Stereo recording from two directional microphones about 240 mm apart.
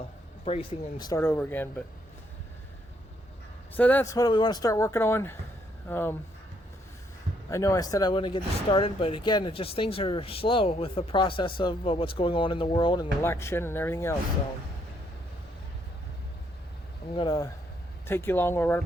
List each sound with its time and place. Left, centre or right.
0.4 s speech: left
3.8 s speech: centre
7.5 s speech: centre
17.2 s speech: centre